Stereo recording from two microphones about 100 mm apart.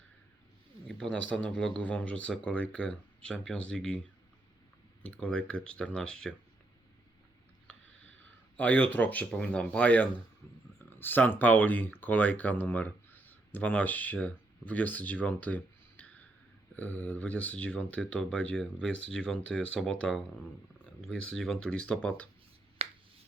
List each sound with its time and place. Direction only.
0.9 s speech: 5° left (ahead or behind)
5.0 s speech: 10° left (ahead or behind)
8.5 s speech: 15° left (ahead or behind)
10.4 s speech: 30° left (ahead or behind); by 22.3 s 10° left (ahead or behind)
22.8 s finger snapping: 90° right